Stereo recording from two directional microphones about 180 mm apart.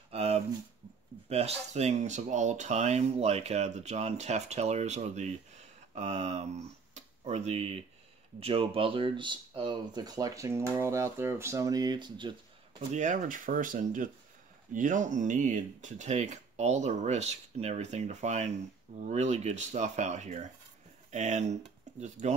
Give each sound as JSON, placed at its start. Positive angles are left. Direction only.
{"t": 0.1, "sound": "a sound", "side_deg": -35}
{"t": 1.3, "sound": "speech", "side_deg": -35}
{"t": 12.9, "sound": "speech", "side_deg": -45}